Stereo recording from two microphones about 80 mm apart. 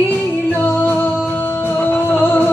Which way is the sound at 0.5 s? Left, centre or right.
Left.